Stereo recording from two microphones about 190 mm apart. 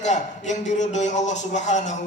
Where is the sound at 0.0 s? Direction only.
40° left (ahead or behind).